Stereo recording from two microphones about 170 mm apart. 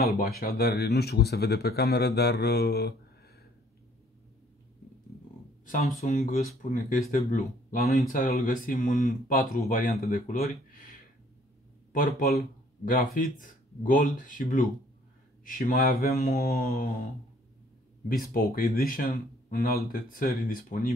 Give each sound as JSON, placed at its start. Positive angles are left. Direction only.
{"t": 0.4, "sound": "speech", "side_deg": 65}
{"t": 5.7, "sound": "speech", "side_deg": 55}
{"t": 11.9, "sound": "speech", "side_deg": 55}
{"t": 12.9, "sound": "speech", "side_deg": 50}
{"t": 18.3, "sound": "speech", "side_deg": 60}